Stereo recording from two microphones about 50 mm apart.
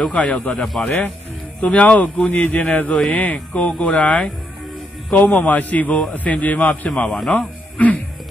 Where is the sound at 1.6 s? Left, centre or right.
Left.